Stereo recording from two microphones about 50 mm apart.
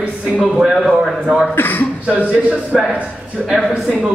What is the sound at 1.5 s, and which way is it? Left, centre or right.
Speech, left.